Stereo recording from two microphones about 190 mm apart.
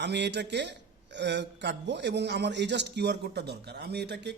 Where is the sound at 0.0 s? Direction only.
65° right (ahead or behind).